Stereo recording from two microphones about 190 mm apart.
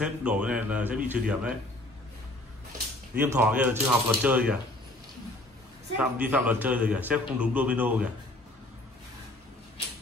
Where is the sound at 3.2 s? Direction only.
10° right (ahead or behind).